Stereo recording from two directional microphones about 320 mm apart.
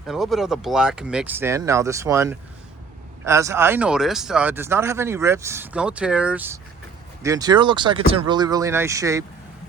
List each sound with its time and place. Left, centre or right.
0.1 s speech: centre